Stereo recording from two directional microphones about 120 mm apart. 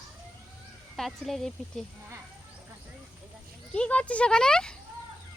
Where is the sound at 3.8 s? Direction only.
10° left (ahead or behind).